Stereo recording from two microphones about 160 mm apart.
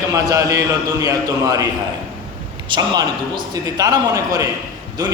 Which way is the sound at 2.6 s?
25° right (ahead or behind).